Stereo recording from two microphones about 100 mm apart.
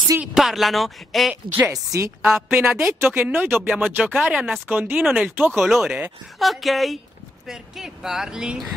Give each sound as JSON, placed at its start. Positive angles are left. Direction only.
{"t": 0.2, "sound": "speech", "side_deg": -5}
{"t": 1.3, "sound": "speech", "side_deg": -20}
{"t": 1.7, "sound": "a woman's voice", "side_deg": -35}
{"t": 2.2, "sound": "speech", "side_deg": -5}
{"t": 4.9, "sound": "speech", "side_deg": -5}